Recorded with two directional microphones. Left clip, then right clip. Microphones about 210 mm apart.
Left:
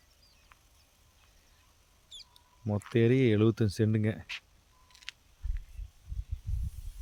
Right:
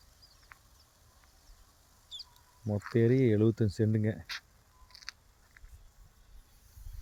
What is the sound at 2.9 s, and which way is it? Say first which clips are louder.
Speech: left 1 dB; 10° left (ahead or behind).